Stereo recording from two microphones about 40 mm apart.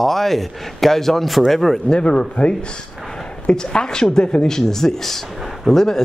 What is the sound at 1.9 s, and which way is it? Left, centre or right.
Speech, left.